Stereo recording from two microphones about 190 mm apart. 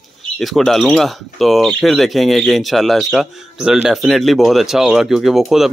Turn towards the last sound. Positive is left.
turn(degrees=0)  # may be behind; listen again after turning